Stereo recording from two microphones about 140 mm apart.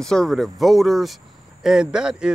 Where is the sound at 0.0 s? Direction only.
5° left (ahead or behind).